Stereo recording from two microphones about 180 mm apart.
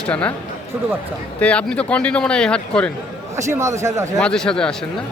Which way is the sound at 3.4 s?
15° right (ahead or behind).